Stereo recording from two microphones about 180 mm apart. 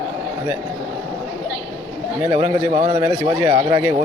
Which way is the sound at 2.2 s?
20° right (ahead or behind).